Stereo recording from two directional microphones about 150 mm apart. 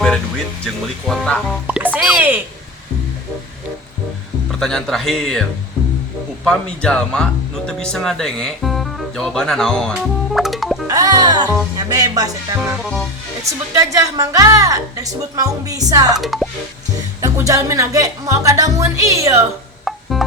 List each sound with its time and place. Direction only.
0.6 s speech: 5° left (ahead or behind)
1.6 s music: 10° right (ahead or behind)
4.6 s speech: centre (ahead or behind)
6.5 s speech: 5° left (ahead or behind)
10.8 s music: 25° right (ahead or behind)
11.8 s a woman's voice: 25° right (ahead or behind)
12.7 s speech: 5° right (ahead or behind)
13.7 s a woman's voice: 20° right (ahead or behind)
16.1 s speech: centre (ahead or behind)
17.2 s a woman's voice: 20° right (ahead or behind)
19.8 s music: centre (ahead or behind)